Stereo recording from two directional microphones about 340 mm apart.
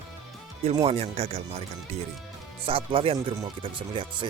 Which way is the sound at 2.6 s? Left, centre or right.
Centre.